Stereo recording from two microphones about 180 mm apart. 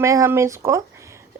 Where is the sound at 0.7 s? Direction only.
15° right (ahead or behind).